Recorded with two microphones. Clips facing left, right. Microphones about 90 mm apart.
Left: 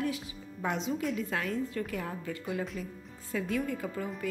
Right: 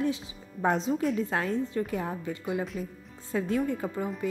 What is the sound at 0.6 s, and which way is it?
A woman's voice, 35° right (ahead or behind).